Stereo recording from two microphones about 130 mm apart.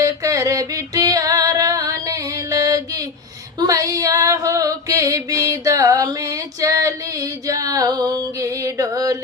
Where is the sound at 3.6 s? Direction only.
25° right (ahead or behind).